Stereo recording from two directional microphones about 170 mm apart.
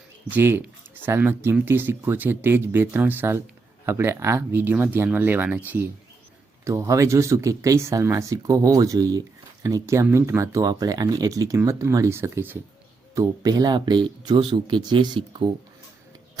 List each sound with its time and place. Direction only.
0.3 s speech: 10° right (ahead or behind); by 15.4 s 30° right (ahead or behind)